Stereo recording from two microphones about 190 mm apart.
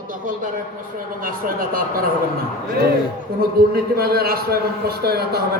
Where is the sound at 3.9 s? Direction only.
55° right (ahead or behind).